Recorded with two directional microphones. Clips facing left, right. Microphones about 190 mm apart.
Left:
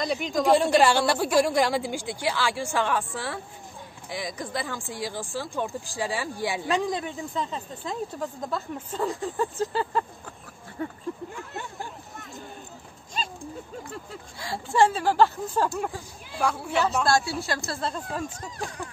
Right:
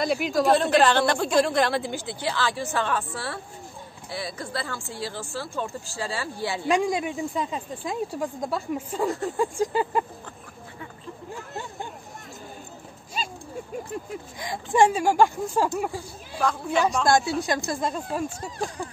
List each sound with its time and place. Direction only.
0.0 s a woman's voice: 5° right (ahead or behind)
0.5 s a woman's voice: 10° left (ahead or behind)
4.1 s a woman's voice: 15° left (ahead or behind)
6.7 s speech: 10° right (ahead or behind)
10.8 s speech: 40° left (ahead or behind)
13.2 s dog: 10° right (ahead or behind)
13.9 s speech: 15° right (ahead or behind)
16.3 s a woman's voice: 10° left (ahead or behind)
17.0 s speech: 20° right (ahead or behind)